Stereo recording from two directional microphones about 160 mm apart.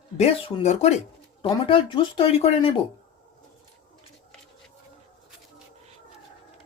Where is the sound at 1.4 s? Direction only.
35° left (ahead or behind).